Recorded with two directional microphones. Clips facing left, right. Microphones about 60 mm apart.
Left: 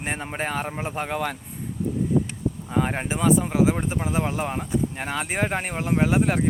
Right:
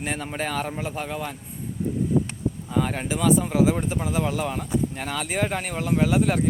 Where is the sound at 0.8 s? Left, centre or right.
Left.